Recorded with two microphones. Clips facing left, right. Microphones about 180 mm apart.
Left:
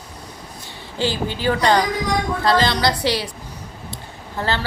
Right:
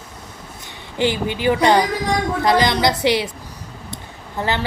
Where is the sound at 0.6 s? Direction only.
20° right (ahead or behind).